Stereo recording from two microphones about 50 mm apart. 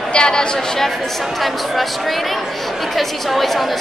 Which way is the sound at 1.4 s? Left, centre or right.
Centre.